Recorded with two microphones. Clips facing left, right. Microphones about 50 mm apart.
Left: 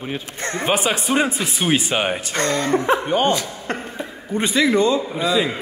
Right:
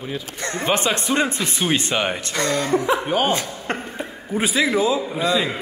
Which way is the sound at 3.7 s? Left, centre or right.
Right.